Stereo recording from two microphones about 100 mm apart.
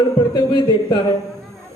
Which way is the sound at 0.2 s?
50° left (ahead or behind).